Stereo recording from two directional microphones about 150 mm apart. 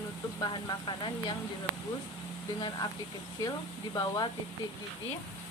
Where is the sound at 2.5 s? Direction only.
30° left (ahead or behind).